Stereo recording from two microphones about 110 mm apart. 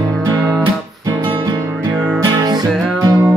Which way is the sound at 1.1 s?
45° right (ahead or behind).